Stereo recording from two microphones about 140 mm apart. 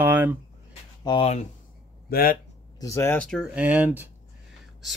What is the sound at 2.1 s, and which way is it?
Speech, 90° left.